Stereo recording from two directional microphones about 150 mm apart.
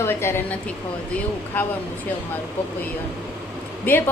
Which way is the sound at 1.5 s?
10° left (ahead or behind).